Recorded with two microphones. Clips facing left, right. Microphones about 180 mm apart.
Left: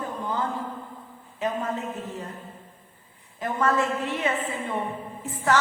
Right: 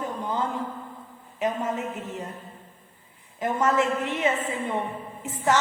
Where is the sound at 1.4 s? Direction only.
15° right (ahead or behind).